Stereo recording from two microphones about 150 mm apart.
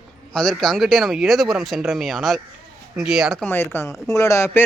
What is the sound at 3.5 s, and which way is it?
Speech, 15° left (ahead or behind).